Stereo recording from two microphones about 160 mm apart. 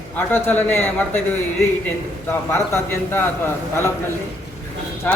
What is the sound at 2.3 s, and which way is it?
A man's voice, 15° left (ahead or behind).